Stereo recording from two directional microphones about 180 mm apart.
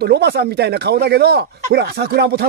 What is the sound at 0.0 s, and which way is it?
Speech, 65° right (ahead or behind).